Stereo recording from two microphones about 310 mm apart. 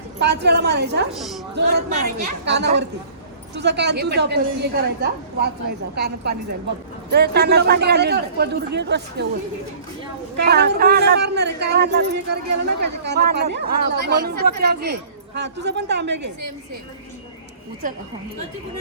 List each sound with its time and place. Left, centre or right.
0.2 s a man's voice: right
1.1 s a woman's voice: centre
1.5 s a man's voice: right
10.3 s a man's voice: right